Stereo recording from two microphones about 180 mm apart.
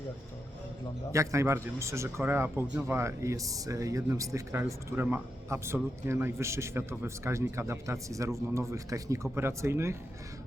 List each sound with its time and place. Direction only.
1.1 s a man's voice: 15° right (ahead or behind)